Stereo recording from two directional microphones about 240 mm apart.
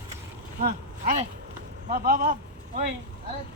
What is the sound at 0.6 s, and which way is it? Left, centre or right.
A man's voice, right.